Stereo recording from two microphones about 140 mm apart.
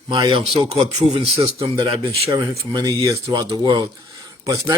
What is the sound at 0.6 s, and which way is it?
Speech, 45° right (ahead or behind).